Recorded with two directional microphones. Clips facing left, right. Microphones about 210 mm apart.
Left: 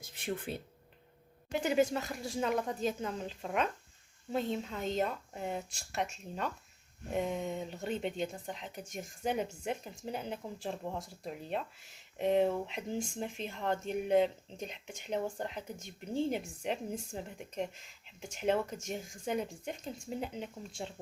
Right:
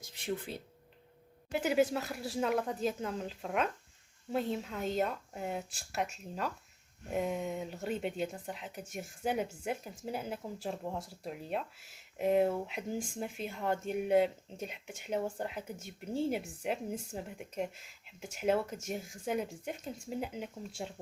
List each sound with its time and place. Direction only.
0.5 s speech: 55° left (ahead or behind)
1.5 s speech: 5° right (ahead or behind)